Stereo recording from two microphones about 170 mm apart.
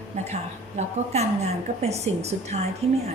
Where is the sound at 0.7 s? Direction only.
40° right (ahead or behind).